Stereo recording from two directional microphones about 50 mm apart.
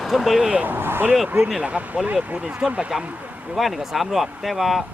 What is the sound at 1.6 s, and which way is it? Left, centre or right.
Speech, right.